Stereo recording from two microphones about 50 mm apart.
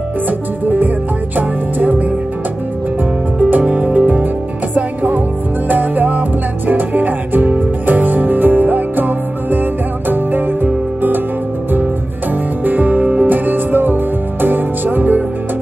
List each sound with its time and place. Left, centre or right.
0.7 s music: right
3.4 s music: right
12.6 s music: right